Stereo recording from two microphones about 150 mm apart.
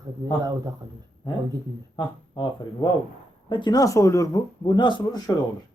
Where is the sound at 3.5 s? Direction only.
30° left (ahead or behind).